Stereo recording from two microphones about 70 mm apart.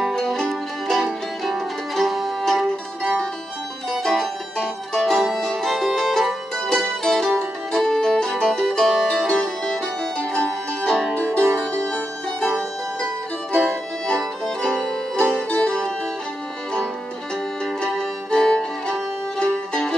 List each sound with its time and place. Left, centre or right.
0.1 s music: centre
3.9 s music: centre
10.1 s music: centre
13.7 s music: centre
15.5 s music: centre
17.8 s music: centre